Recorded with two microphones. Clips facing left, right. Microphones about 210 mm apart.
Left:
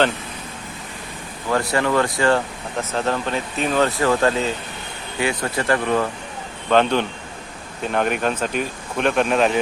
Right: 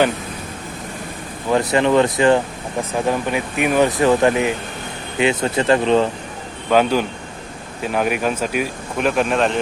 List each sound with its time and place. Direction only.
1.5 s speech: 20° right (ahead or behind)
6.7 s speech: 5° right (ahead or behind)